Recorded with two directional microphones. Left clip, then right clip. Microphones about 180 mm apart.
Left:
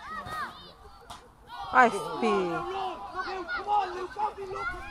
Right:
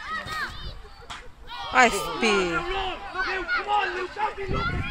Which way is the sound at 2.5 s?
45° left (ahead or behind).